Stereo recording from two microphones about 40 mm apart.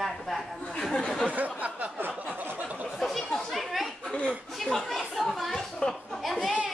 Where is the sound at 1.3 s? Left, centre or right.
Right.